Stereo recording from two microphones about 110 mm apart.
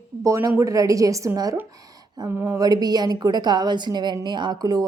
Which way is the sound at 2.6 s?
35° right (ahead or behind).